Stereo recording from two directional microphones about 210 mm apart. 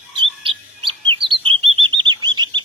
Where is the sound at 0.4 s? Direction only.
25° right (ahead or behind).